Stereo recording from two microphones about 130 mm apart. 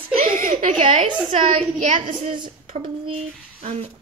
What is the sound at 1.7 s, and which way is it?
Speech, 75° right (ahead or behind).